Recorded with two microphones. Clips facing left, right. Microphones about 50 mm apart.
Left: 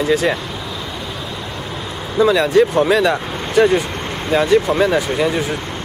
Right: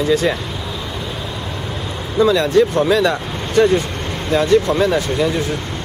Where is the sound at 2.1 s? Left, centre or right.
Centre.